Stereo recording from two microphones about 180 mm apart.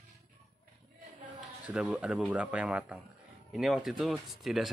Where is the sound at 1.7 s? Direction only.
5° right (ahead or behind).